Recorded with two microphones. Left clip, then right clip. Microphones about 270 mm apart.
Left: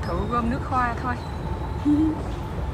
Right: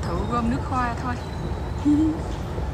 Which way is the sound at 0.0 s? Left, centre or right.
Centre.